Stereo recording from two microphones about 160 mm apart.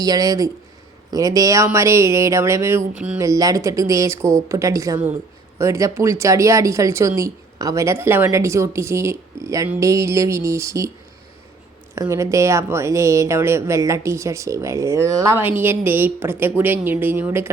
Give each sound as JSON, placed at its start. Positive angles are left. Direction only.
{"t": 0.0, "sound": "a woman's voice", "side_deg": -25}
{"t": 3.2, "sound": "a woman's voice", "side_deg": -20}
{"t": 11.9, "sound": "speech", "side_deg": -20}